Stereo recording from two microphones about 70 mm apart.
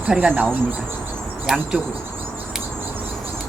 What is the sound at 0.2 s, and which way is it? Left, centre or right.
Speech, right.